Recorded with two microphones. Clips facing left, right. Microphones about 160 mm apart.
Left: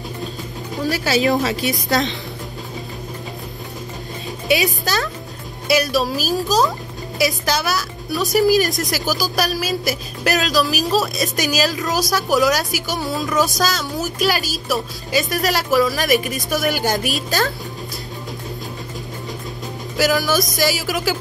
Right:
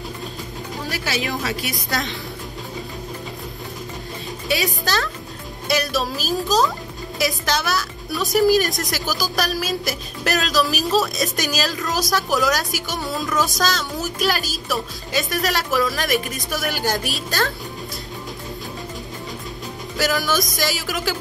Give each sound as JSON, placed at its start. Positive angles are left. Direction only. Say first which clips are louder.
{"t": 0.8, "sound": "speech", "louder": "left 9 dB", "side_deg": 35}
{"t": 1.6, "sound": "a woman's voice", "louder": "left 6 dB", "side_deg": 20}
{"t": 4.5, "sound": "a woman's voice", "louder": "left 4 dB", "side_deg": 15}
{"t": 5.7, "sound": "a woman's voice", "louder": "left 4 dB", "side_deg": 5}
{"t": 20.0, "sound": "a woman's voice", "louder": "left 4 dB", "side_deg": 5}